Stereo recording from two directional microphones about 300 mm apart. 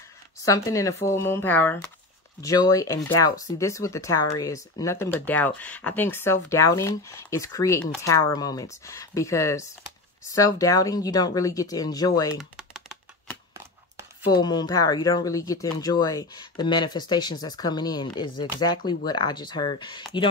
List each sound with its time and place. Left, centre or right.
0.5 s speech: centre
12.4 s a sound: centre
14.4 s speech: centre